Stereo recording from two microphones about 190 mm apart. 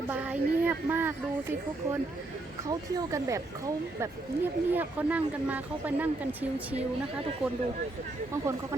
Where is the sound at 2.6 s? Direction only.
20° right (ahead or behind).